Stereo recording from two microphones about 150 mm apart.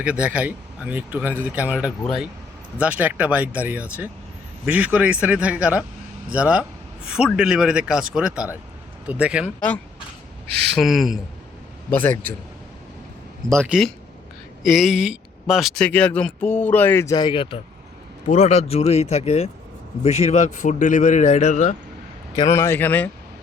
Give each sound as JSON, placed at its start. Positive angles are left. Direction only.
{"t": 0.0, "sound": "speech", "side_deg": -10}
{"t": 9.6, "sound": "speech", "side_deg": 10}
{"t": 11.9, "sound": "speech", "side_deg": 15}
{"t": 13.6, "sound": "speech", "side_deg": -5}
{"t": 17.2, "sound": "speech", "side_deg": 35}
{"t": 18.3, "sound": "speech", "side_deg": 45}
{"t": 22.4, "sound": "speech", "side_deg": 15}